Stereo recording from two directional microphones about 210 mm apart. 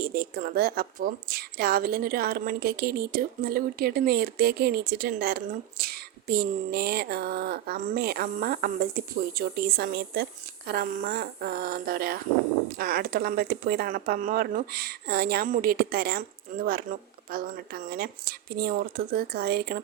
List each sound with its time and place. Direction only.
0.0 s a woman's voice: 45° right (ahead or behind)